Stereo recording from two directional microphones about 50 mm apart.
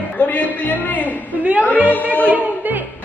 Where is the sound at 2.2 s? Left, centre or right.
Right.